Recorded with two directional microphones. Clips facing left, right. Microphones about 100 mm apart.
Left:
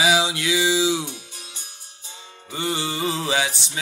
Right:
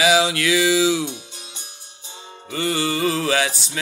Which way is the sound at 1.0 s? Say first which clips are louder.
Right 6 dB; 20° right (ahead or behind).